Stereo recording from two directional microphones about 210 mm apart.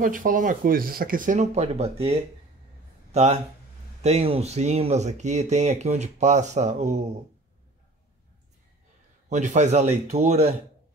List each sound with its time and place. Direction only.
0.0 s speech: 40° right (ahead or behind)
9.3 s speech: 35° right (ahead or behind)